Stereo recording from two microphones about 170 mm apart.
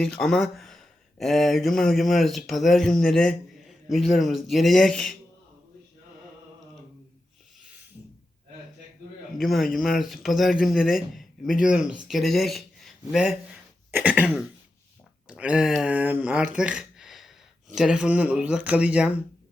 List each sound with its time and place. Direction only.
0.0 s speech: 5° left (ahead or behind)
9.4 s speech: centre (ahead or behind)
15.3 s speech: 5° right (ahead or behind)
16.6 s a sound: 5° right (ahead or behind)
17.7 s speech: 5° right (ahead or behind)